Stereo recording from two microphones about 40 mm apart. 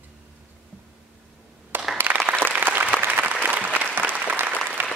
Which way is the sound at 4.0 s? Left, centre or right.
Right.